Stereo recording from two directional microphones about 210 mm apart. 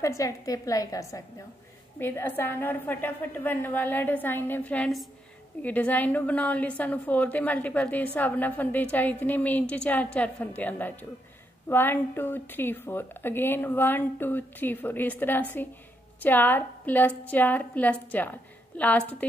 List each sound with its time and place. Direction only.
0.0 s a woman's voice: 15° left (ahead or behind)